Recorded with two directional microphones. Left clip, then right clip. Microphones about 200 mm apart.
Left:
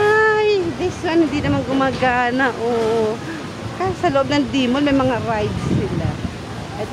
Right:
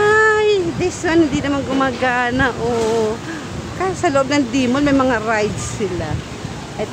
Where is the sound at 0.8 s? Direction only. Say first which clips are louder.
Right 3 dB; 10° right (ahead or behind).